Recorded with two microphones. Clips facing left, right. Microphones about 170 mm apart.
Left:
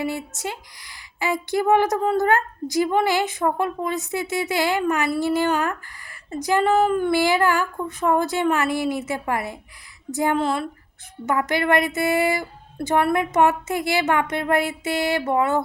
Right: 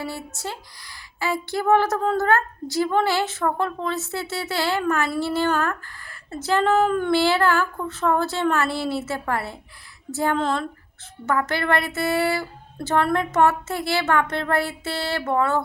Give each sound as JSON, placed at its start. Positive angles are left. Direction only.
{"t": 0.0, "sound": "a woman's voice", "side_deg": 20}